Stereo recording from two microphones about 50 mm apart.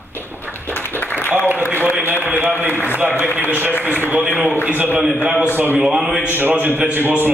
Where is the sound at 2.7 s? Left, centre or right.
Left.